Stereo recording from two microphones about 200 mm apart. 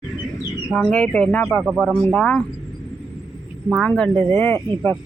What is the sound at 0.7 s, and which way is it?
Speech, 5° left (ahead or behind).